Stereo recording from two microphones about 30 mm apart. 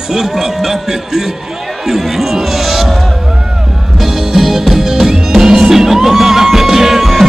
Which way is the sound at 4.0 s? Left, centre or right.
Centre.